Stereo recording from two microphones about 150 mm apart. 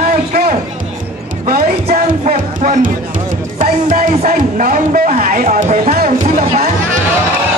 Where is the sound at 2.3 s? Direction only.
60° right (ahead or behind).